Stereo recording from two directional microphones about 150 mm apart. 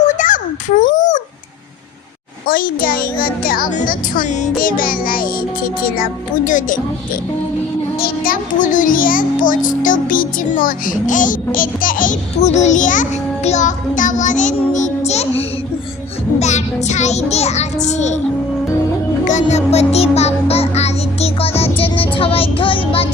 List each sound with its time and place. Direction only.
0.0 s a sound: 55° left (ahead or behind)
2.5 s a child's voice: 75° left (ahead or behind)
7.9 s a child's voice: 80° left; by 15.3 s 45° left (ahead or behind)
16.4 s child singing: 50° left (ahead or behind)
19.2 s music: 55° left (ahead or behind); by 23.0 s 35° left (ahead or behind)